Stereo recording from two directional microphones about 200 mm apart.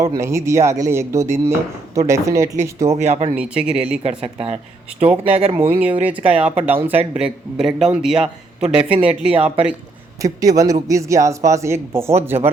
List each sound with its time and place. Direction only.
0.0 s speech: 15° right (ahead or behind)
3.0 s speech: 35° right (ahead or behind)
3.3 s speech: 5° right (ahead or behind)
3.8 s speech: 30° right (ahead or behind)
6.0 s speech: 10° right (ahead or behind)
10.2 s speech: 15° right (ahead or behind)